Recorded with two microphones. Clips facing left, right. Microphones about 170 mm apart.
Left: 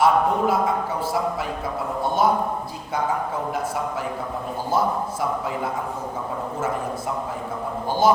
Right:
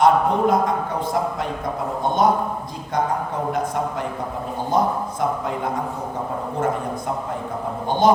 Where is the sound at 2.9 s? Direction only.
5° left (ahead or behind).